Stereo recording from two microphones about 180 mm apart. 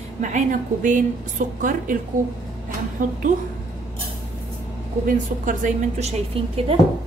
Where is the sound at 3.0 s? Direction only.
45° right (ahead or behind).